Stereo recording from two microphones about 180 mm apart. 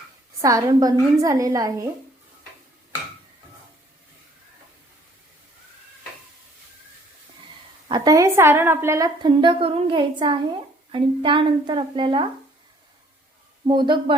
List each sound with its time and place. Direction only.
0.4 s a woman's voice: 20° right (ahead or behind)
7.9 s a woman's voice: 20° right (ahead or behind)
9.2 s a woman's voice: 25° right (ahead or behind)
13.7 s a woman's voice: 25° right (ahead or behind)